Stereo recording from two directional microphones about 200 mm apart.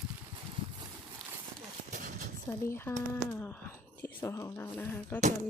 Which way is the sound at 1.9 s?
40° right (ahead or behind).